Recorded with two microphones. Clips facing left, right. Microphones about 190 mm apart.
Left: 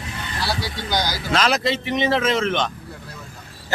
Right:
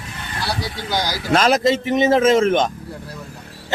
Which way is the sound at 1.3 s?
45° right (ahead or behind).